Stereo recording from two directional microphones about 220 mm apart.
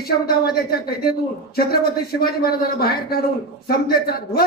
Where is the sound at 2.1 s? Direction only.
45° left (ahead or behind).